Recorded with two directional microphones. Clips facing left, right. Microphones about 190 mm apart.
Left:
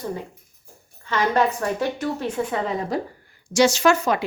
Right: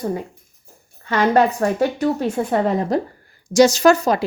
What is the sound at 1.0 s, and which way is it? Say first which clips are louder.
Speech: right 5 dB; 55° right (ahead or behind).